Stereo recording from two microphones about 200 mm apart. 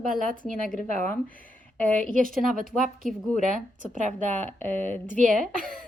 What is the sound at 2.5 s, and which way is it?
Speech, 45° right (ahead or behind).